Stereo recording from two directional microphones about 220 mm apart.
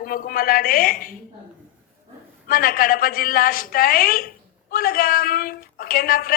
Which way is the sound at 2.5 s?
40° left (ahead or behind).